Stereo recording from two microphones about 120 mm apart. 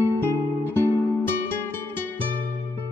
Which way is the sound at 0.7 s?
20° left (ahead or behind).